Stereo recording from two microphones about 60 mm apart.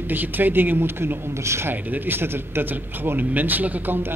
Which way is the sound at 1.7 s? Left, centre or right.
Right.